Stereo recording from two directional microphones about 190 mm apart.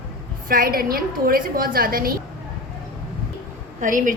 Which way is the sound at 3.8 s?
45° right (ahead or behind).